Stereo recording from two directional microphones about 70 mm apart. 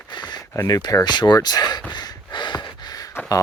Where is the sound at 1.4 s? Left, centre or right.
Left.